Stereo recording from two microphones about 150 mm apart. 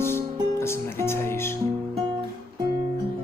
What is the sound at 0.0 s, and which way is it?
Music, 15° left (ahead or behind).